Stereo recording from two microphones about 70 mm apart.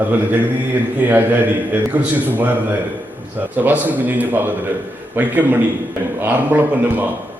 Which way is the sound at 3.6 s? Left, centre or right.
Right.